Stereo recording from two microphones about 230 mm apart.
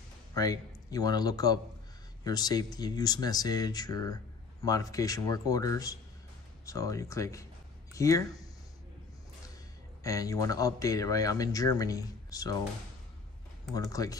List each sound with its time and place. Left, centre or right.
0.3 s speech: centre
10.0 s speech: centre
13.7 s speech: centre